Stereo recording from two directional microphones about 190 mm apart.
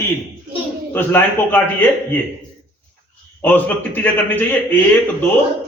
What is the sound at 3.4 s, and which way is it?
A man's voice, 10° left (ahead or behind).